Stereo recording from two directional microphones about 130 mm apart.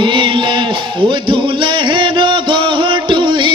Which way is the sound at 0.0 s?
40° right (ahead or behind).